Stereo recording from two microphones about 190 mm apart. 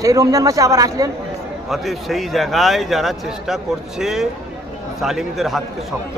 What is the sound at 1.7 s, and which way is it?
A man's voice, centre (ahead or behind).